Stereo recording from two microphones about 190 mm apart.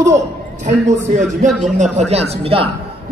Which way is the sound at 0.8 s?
40° right (ahead or behind).